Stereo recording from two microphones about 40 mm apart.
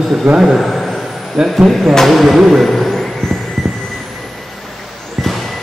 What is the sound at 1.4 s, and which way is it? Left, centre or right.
Speech, centre.